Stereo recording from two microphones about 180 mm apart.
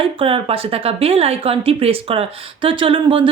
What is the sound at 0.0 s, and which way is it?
A woman's voice, 30° right (ahead or behind).